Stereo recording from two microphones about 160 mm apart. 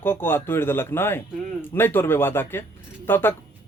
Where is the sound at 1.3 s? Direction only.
Centre (ahead or behind).